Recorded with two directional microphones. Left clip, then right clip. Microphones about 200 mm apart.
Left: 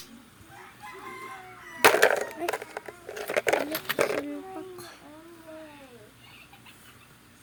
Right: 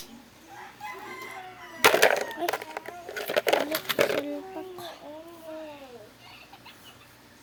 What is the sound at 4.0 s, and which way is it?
Speech, 25° right (ahead or behind).